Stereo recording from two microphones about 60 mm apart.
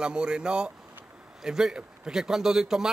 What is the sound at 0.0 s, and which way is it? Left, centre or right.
A man's voice, centre.